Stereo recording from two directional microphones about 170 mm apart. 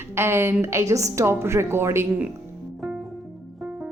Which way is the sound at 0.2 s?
15° right (ahead or behind).